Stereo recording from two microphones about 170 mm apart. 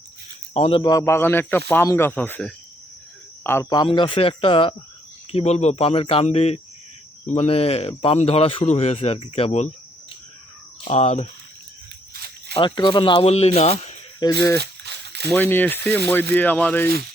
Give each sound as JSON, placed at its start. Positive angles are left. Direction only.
{"t": 0.5, "sound": "speech", "side_deg": 40}
{"t": 0.8, "sound": "speech", "side_deg": 20}
{"t": 10.8, "sound": "speech", "side_deg": 40}
{"t": 12.1, "sound": "snake", "side_deg": -65}
{"t": 12.5, "sound": "speech", "side_deg": 30}
{"t": 14.2, "sound": "speech", "side_deg": 25}
{"t": 14.6, "sound": "a sound", "side_deg": -80}
{"t": 15.3, "sound": "speech", "side_deg": 10}